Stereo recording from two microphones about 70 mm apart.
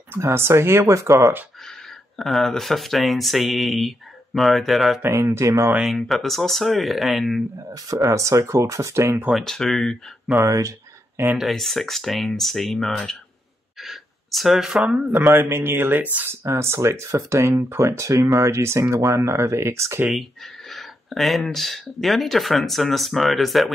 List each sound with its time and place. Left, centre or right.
0.2 s speech: right
1.7 s speech: centre
5.0 s speech: right
5.9 s speech: centre
7.7 s speech: right
9.3 s speech: centre
10.3 s a sound: right
11.3 s speech: centre
13.7 s a sound: centre
15.3 s speech: right
16.4 s speech: right
20.1 s speech: centre